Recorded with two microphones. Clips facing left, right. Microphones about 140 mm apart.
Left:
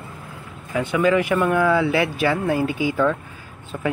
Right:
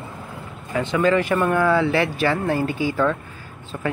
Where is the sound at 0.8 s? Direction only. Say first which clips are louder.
Even; 10° left (ahead or behind).